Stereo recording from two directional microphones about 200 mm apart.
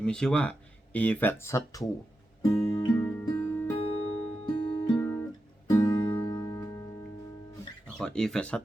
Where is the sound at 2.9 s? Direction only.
5° left (ahead or behind).